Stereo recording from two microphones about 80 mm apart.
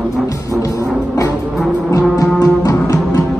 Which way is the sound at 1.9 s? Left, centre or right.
Left.